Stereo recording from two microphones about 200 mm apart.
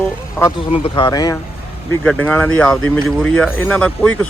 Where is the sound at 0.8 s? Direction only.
20° left (ahead or behind).